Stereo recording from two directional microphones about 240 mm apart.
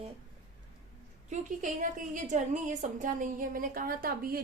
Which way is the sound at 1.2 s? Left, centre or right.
Right.